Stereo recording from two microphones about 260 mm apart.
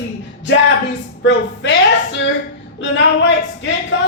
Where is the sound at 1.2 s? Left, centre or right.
Left.